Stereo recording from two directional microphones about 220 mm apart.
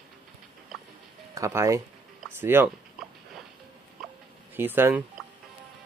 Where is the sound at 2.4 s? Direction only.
10° right (ahead or behind).